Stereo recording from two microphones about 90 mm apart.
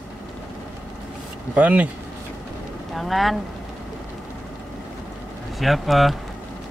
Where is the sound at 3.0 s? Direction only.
Centre (ahead or behind).